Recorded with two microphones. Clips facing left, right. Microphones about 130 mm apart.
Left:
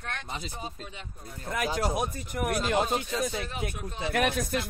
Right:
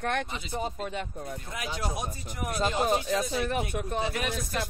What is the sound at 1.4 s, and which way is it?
Speech, 50° left (ahead or behind).